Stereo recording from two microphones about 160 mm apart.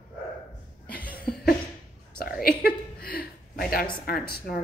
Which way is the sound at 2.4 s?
70° left (ahead or behind).